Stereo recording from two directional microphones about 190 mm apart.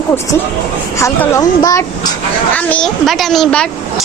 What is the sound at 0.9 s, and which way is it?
Speech, 15° left (ahead or behind).